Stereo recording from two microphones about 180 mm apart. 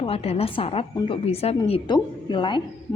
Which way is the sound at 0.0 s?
35° left (ahead or behind).